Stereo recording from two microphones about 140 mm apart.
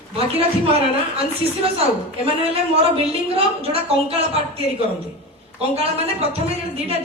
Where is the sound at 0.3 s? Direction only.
45° right (ahead or behind).